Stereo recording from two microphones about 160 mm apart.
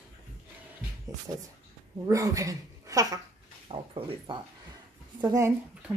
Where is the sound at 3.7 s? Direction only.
35° right (ahead or behind).